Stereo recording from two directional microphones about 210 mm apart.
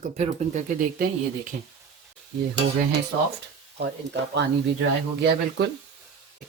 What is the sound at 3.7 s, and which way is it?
Speech, 55° right (ahead or behind).